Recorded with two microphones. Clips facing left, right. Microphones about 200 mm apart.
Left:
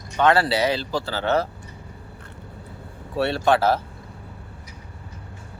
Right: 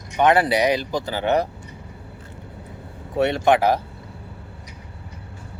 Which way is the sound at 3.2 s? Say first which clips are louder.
Right 2 dB; 20° right (ahead or behind).